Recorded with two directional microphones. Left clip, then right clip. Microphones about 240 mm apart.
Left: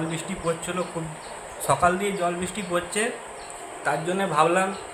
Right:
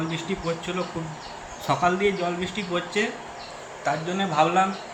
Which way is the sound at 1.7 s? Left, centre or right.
Left.